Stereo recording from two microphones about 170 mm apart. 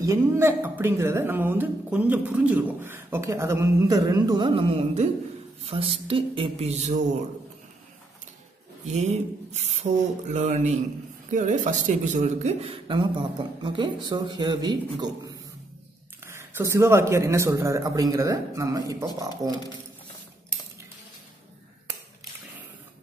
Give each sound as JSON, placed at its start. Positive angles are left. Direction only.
{"t": 0.0, "sound": "speech", "side_deg": -15}
{"t": 8.8, "sound": "speech", "side_deg": -40}